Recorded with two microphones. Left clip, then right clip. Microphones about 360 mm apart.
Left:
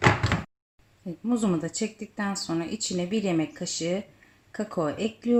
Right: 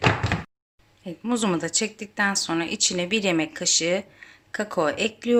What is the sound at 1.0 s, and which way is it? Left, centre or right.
Speech, right.